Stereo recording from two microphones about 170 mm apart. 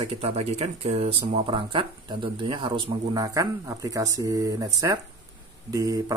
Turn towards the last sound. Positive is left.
turn(degrees=-20)  # may be behind; listen again after turning